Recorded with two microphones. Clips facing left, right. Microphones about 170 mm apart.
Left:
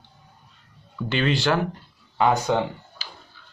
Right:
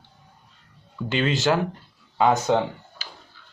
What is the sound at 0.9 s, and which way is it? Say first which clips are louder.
Speech: even; 20° right (ahead or behind).